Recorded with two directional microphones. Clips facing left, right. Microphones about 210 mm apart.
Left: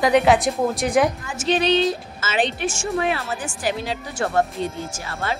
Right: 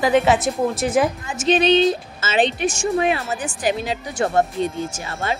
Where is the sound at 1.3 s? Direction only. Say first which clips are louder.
Right 3 dB; 20° right (ahead or behind).